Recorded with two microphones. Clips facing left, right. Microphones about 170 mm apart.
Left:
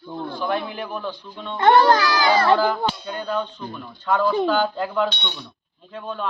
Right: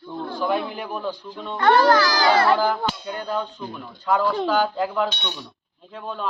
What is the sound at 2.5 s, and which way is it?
Speech, 5° right (ahead or behind).